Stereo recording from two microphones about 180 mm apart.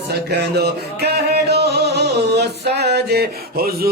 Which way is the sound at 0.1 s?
65° right (ahead or behind).